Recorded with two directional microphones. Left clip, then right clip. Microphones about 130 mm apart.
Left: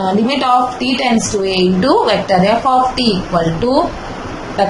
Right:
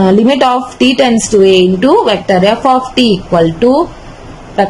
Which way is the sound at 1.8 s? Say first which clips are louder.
Right 3 dB; 90° right.